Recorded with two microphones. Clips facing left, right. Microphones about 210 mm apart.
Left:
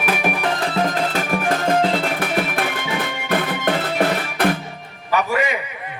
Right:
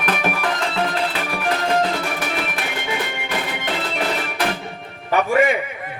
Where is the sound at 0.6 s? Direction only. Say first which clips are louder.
Left 2 dB; 40° left (ahead or behind).